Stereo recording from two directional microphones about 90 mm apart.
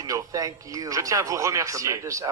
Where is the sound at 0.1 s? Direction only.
40° right (ahead or behind).